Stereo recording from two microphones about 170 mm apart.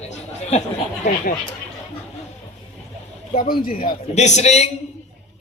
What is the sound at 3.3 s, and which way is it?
Speech, 55° left (ahead or behind).